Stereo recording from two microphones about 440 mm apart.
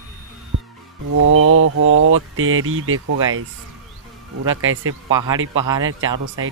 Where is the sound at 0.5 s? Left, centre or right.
Right.